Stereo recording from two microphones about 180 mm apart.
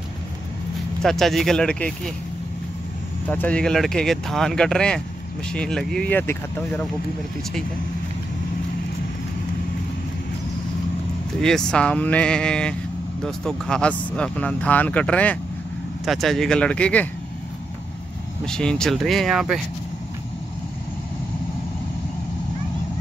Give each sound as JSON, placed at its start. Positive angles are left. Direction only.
{"t": 1.0, "sound": "speech", "side_deg": 0}
{"t": 3.3, "sound": "speech", "side_deg": 10}
{"t": 11.3, "sound": "speech", "side_deg": 5}
{"t": 18.4, "sound": "speech", "side_deg": 5}